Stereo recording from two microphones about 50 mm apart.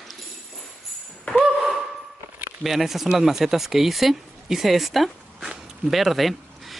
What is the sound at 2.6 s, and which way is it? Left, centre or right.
Speech, centre.